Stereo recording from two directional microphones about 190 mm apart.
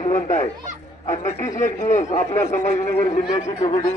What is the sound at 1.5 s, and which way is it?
Speech, 40° left (ahead or behind).